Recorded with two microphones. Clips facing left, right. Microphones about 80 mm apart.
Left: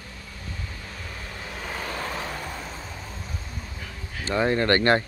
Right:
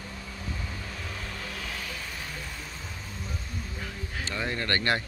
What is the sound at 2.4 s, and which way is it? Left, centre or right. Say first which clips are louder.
Vehicle: left 6 dB; left.